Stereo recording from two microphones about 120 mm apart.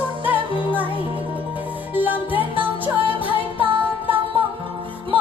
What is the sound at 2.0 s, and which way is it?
Music, 15° right (ahead or behind).